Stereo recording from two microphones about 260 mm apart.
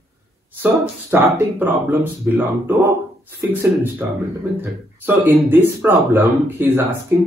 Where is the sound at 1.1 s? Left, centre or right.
Centre.